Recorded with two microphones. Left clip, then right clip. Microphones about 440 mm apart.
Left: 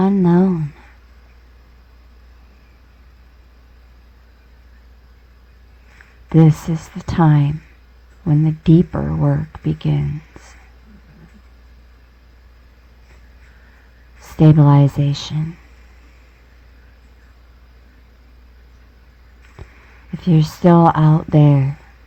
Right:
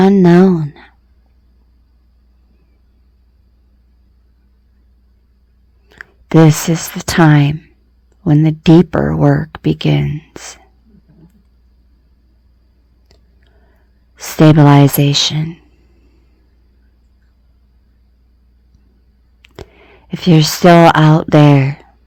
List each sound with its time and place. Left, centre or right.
0.0 s speech: centre
6.2 s speech: centre
14.2 s speech: centre
20.1 s speech: centre